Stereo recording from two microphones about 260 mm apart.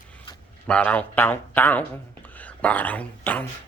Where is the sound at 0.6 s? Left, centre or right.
Centre.